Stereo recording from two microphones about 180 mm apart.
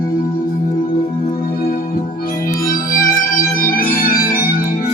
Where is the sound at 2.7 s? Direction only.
50° left (ahead or behind).